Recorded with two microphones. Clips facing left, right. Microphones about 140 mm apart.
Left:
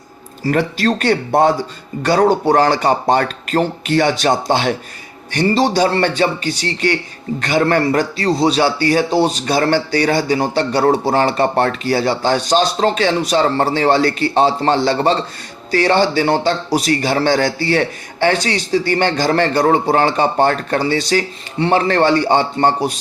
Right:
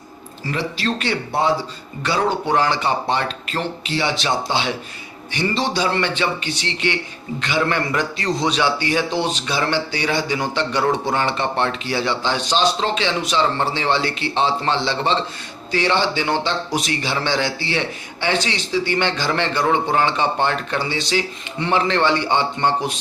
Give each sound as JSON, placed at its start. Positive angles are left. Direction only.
{"t": 0.5, "sound": "a man's voice", "side_deg": 50}